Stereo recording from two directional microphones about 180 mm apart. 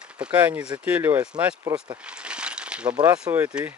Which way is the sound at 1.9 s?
5° right (ahead or behind).